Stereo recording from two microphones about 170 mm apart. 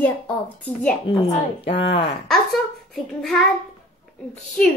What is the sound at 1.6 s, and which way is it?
Speech, 35° left (ahead or behind).